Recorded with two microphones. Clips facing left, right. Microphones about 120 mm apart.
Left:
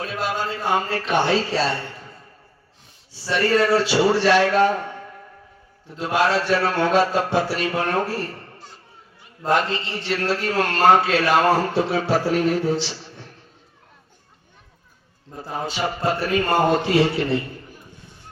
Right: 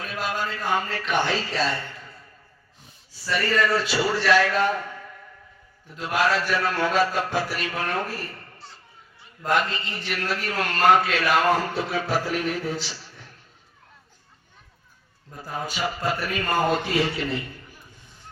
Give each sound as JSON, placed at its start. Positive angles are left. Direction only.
{"t": 0.0, "sound": "speech", "side_deg": 30}
{"t": 1.1, "sound": "a man's voice", "side_deg": 20}
{"t": 1.5, "sound": "a man's voice", "side_deg": 35}
{"t": 3.2, "sound": "a man's voice", "side_deg": 25}
{"t": 9.4, "sound": "a man's voice", "side_deg": 30}
{"t": 15.3, "sound": "a man's voice", "side_deg": 25}